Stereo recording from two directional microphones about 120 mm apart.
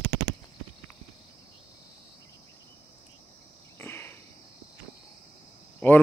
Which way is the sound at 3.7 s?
20° left (ahead or behind).